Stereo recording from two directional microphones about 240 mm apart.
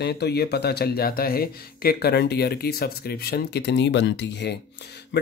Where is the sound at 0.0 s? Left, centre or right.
Left.